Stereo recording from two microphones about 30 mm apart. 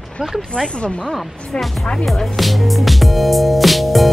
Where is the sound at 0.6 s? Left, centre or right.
Left.